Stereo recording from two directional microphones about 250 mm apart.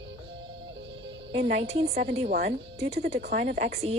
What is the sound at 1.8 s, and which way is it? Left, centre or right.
Speech, right.